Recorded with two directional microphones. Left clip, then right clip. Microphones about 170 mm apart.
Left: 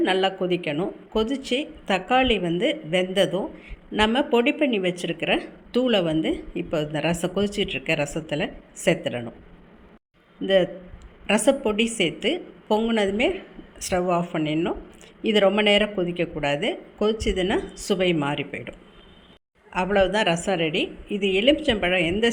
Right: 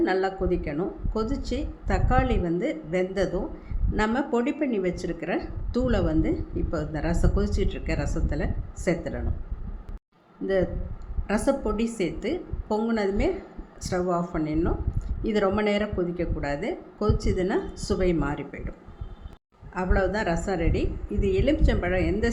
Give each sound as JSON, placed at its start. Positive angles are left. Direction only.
{"t": 0.0, "sound": "speech", "side_deg": 15}
{"t": 10.4, "sound": "speech", "side_deg": 15}
{"t": 19.7, "sound": "speech", "side_deg": 15}